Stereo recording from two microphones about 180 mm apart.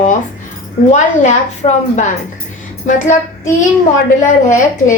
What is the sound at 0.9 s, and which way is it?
A woman's voice, 40° left (ahead or behind).